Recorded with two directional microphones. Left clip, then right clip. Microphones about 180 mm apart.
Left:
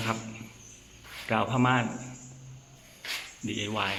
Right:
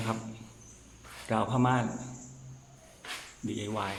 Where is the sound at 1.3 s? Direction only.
10° right (ahead or behind).